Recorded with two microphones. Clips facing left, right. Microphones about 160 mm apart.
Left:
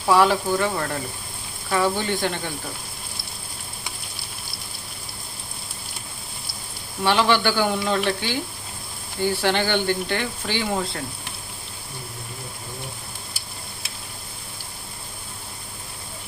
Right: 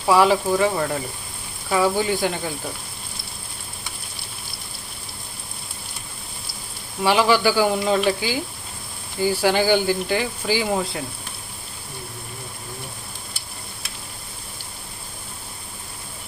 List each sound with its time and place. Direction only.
0.1 s speech: centre (ahead or behind)
7.0 s speech: 5° right (ahead or behind)